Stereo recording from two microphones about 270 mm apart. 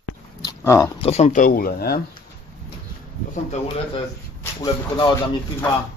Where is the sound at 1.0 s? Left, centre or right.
Left.